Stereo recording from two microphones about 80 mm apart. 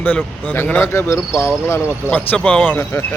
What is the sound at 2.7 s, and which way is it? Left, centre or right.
Speech, left.